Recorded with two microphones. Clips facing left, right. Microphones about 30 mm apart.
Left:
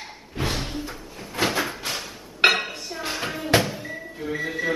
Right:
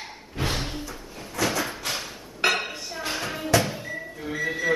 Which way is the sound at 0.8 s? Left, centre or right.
Left.